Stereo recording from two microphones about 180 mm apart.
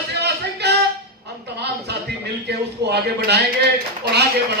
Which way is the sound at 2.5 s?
65° right (ahead or behind).